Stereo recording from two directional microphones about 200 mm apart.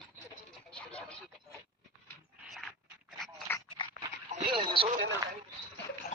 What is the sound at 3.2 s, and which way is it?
Dog, 10° left (ahead or behind).